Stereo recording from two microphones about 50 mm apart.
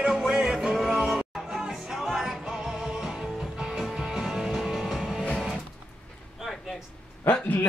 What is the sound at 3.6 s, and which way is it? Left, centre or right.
Music, centre.